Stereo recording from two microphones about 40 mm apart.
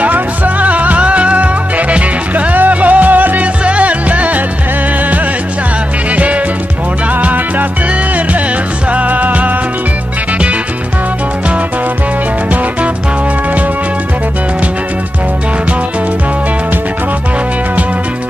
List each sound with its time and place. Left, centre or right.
0.0 s music: right
3.6 s music: right
6.1 s music: right
8.9 s music: right